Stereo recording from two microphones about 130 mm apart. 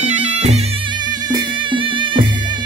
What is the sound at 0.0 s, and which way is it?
Music, 60° right (ahead or behind).